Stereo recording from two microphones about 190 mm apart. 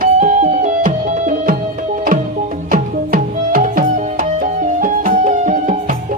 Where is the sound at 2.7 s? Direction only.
45° right (ahead or behind).